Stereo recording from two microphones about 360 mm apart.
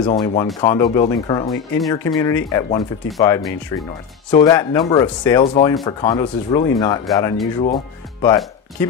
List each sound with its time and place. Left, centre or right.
0.0 s speech: centre